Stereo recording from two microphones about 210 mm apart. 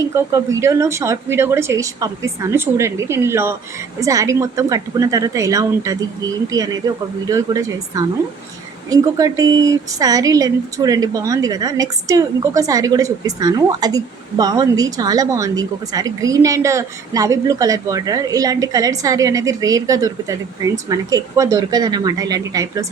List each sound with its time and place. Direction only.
0.0 s speech: 15° right (ahead or behind)